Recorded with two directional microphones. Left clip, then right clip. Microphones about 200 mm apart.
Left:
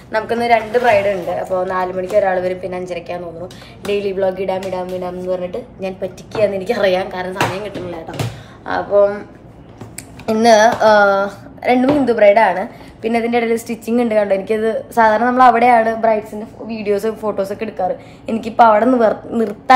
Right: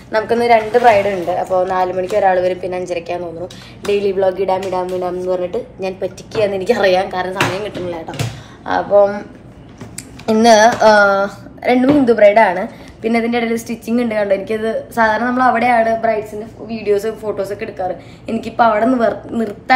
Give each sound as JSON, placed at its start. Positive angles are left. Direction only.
{"t": 0.1, "sound": "speech", "side_deg": 5}
{"t": 10.2, "sound": "speech", "side_deg": 15}